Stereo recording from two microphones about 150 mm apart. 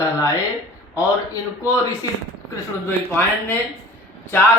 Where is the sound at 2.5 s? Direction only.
15° left (ahead or behind).